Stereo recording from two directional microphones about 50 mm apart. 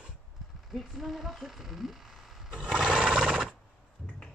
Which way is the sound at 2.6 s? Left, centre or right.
Centre.